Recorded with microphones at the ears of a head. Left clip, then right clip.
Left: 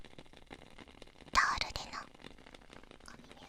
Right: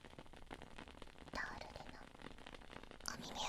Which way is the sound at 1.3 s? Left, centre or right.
Left.